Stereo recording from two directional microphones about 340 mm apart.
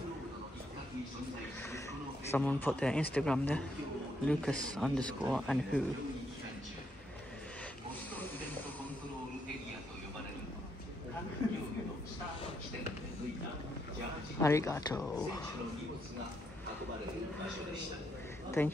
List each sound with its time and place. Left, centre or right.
2.3 s speech: centre
14.4 s speech: centre
18.6 s speech: centre